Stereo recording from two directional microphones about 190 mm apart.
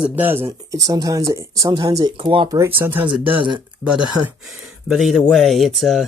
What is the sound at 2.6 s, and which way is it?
Speech, 10° right (ahead or behind).